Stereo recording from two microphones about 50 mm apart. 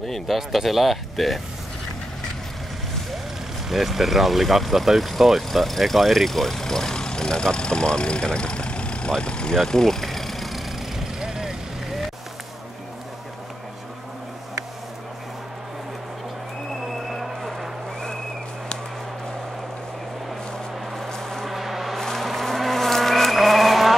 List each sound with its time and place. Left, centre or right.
0.0 s speech: centre
3.6 s speech: centre
9.6 s vehicle: centre
11.1 s vehicle: centre
16.8 s a sound: centre
20.9 s cattle: centre